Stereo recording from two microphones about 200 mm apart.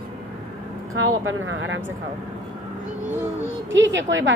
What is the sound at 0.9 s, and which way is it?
Speech, 85° right.